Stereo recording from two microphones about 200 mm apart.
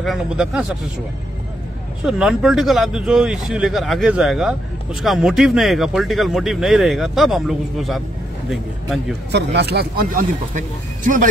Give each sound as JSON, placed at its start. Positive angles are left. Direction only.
{"t": 0.0, "sound": "speech", "side_deg": 0}
{"t": 2.0, "sound": "speech", "side_deg": 0}
{"t": 9.3, "sound": "speech", "side_deg": -55}